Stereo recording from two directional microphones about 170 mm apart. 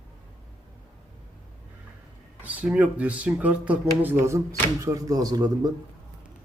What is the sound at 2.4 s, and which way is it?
Speech, 10° right (ahead or behind).